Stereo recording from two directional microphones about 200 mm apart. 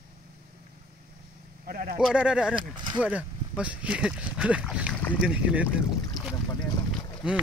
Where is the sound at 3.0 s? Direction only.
5° right (ahead or behind).